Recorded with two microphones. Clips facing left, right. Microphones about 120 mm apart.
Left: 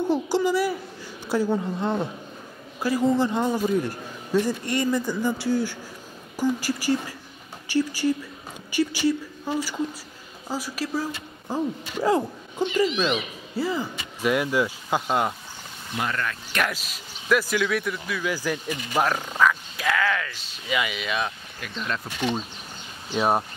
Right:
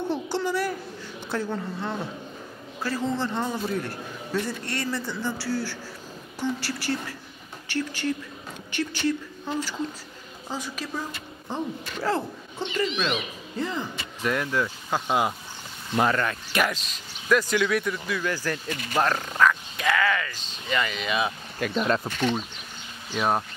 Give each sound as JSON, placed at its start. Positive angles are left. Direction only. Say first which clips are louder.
{"t": 0.1, "sound": "a child's voice", "louder": "left 6 dB", "side_deg": 10}
{"t": 16.0, "sound": "speech", "louder": "right 5 dB", "side_deg": -35}
{"t": 16.7, "sound": "speech", "louder": "even", "side_deg": 5}
{"t": 21.5, "sound": "speech", "louder": "right 8 dB", "side_deg": -50}
{"t": 23.1, "sound": "speech", "louder": "left 2 dB", "side_deg": 15}